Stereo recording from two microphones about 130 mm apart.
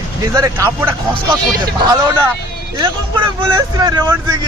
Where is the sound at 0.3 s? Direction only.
25° right (ahead or behind).